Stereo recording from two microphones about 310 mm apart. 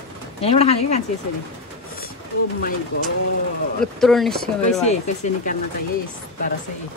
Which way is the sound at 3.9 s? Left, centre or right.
Centre.